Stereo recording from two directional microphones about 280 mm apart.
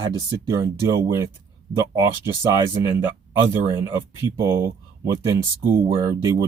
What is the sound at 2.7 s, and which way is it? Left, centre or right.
Speech, centre.